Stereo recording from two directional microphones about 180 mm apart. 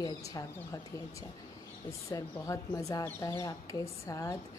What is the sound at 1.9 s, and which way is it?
A woman's voice, 15° left (ahead or behind).